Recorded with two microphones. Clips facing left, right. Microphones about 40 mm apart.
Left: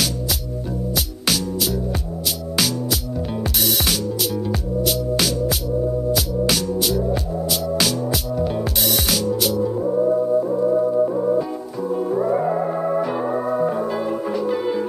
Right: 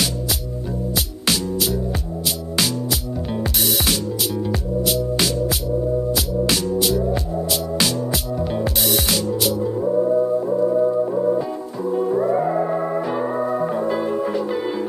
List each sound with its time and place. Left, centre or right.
3.3 s music: centre
6.8 s music: centre